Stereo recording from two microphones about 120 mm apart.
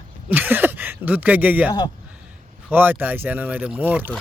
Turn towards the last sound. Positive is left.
turn(degrees=-15)  # may be behind; listen again after turning